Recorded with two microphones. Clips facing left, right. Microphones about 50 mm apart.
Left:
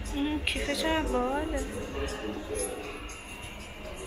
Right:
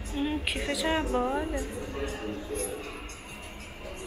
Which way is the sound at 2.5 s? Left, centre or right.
Left.